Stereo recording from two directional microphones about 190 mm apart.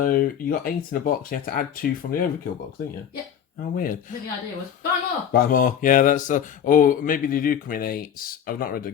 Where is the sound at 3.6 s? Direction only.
45° left (ahead or behind).